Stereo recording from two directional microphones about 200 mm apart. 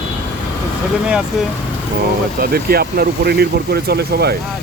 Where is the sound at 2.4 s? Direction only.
50° right (ahead or behind).